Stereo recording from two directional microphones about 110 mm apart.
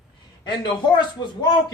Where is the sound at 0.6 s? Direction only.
45° left (ahead or behind).